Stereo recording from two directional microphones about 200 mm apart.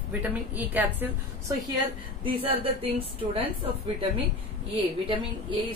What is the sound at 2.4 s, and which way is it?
Speech, 30° right (ahead or behind).